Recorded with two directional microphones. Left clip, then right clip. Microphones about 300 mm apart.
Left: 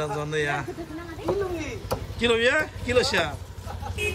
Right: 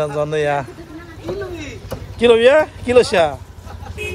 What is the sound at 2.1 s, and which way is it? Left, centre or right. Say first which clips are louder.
Speech: right 11 dB; centre.